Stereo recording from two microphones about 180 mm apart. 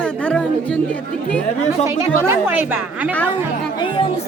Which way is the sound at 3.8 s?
30° left (ahead or behind).